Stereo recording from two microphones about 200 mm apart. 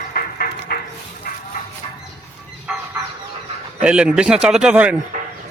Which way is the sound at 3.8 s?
5° right (ahead or behind).